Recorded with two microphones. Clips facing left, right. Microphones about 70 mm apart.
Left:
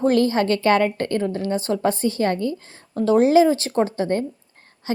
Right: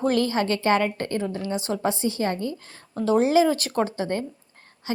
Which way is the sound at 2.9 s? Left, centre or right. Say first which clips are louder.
Left 4 dB; left.